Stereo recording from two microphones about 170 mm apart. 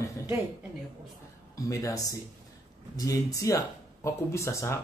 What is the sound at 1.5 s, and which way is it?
Speech, 20° left (ahead or behind).